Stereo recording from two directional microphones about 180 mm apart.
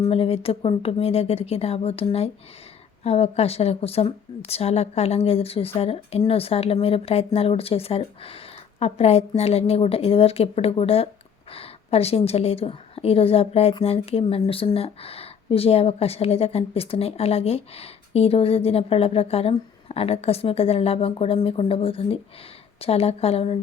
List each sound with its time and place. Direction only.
0.0 s speech: 30° left (ahead or behind)